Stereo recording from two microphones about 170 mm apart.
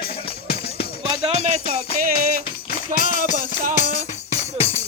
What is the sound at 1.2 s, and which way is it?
Music, 35° right (ahead or behind).